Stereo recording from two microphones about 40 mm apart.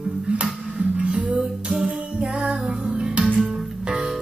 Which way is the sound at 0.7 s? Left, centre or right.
Right.